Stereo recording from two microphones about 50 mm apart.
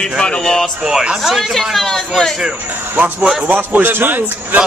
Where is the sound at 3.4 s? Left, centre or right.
Right.